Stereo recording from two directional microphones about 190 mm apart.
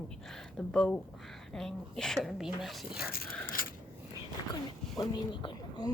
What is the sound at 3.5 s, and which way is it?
Biting, 45° left (ahead or behind).